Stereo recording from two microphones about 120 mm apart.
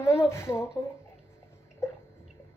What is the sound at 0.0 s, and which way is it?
Speech, 20° left (ahead or behind).